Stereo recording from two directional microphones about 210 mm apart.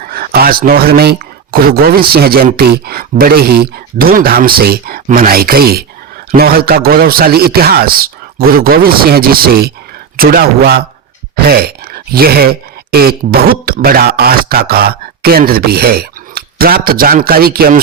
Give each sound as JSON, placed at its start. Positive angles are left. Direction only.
{"t": 0.0, "sound": "a man's voice", "side_deg": -45}